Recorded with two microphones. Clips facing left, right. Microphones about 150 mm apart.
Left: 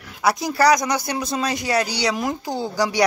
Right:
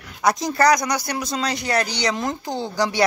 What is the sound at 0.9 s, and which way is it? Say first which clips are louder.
Speech: left 1 dB; 25° left (ahead or behind).